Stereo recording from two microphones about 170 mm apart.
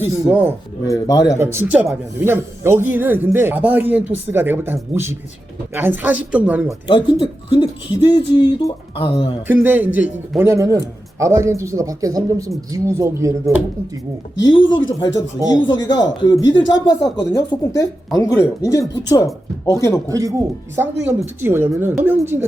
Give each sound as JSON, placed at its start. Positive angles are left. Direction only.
{"t": 0.0, "sound": "speech", "side_deg": -10}
{"t": 0.9, "sound": "speech", "side_deg": 20}
{"t": 1.4, "sound": "speech", "side_deg": -15}
{"t": 6.8, "sound": "speech", "side_deg": 25}
{"t": 9.5, "sound": "speech", "side_deg": -10}
{"t": 14.6, "sound": "speech", "side_deg": 90}
{"t": 15.4, "sound": "speech", "side_deg": 25}
{"t": 20.1, "sound": "speech", "side_deg": -20}